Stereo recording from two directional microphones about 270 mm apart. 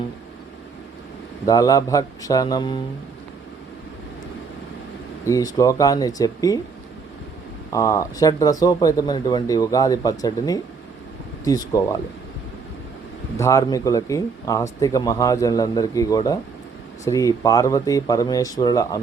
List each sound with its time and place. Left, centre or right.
1.5 s speech: centre
5.2 s speech: centre
7.7 s speech: centre
13.3 s speech: centre